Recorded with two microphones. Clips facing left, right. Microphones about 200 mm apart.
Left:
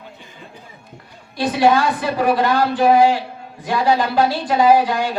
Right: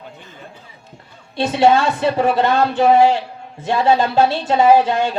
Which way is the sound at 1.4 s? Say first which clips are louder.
Right 1 dB; 25° right (ahead or behind).